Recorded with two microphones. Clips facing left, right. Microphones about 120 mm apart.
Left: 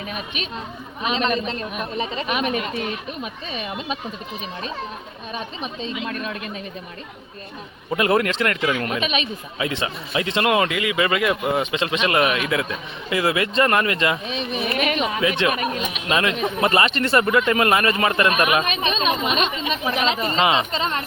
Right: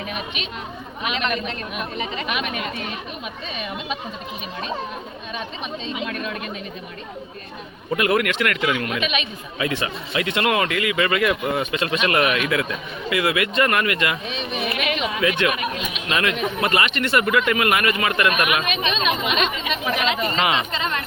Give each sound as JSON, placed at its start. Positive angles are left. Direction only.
{"t": 1.0, "sound": "a man's voice", "side_deg": 30}
{"t": 7.9, "sound": "speech", "side_deg": 30}
{"t": 9.6, "sound": "speech", "side_deg": 25}
{"t": 15.2, "sound": "speech", "side_deg": 25}
{"t": 16.1, "sound": "a man's voice", "side_deg": 25}